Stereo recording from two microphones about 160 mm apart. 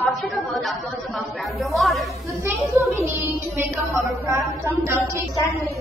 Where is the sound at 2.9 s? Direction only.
20° right (ahead or behind).